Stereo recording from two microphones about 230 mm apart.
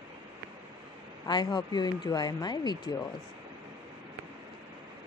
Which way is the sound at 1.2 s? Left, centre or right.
Centre.